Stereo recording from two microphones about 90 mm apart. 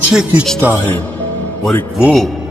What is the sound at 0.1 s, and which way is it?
Speech, 10° right (ahead or behind).